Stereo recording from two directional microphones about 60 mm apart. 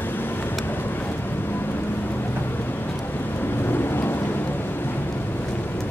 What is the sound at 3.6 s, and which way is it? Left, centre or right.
Thunder, left.